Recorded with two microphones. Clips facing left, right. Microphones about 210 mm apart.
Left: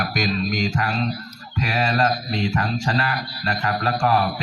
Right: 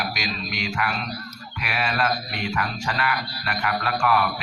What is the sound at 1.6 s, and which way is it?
Mantra, 35° left (ahead or behind).